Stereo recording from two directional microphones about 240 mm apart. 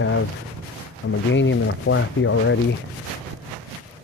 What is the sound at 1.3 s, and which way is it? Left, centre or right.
Speech, left.